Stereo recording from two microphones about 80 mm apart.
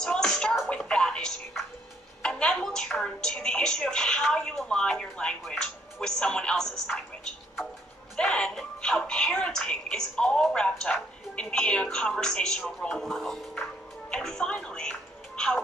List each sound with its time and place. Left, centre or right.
0.0 s music: centre
2.2 s a woman's voice: centre
8.2 s speech: centre